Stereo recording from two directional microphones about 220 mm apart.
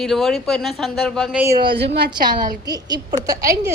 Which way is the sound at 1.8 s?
50° right (ahead or behind).